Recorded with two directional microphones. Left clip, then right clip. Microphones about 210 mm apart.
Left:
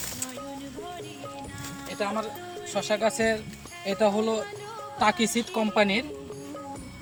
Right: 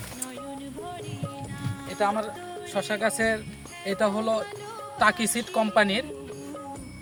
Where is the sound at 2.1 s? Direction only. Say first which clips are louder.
Right 3 dB; 10° right (ahead or behind).